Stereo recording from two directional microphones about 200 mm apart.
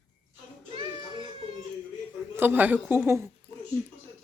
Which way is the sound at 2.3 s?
10° right (ahead or behind).